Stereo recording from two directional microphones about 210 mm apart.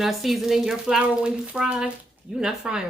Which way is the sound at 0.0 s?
Centre (ahead or behind).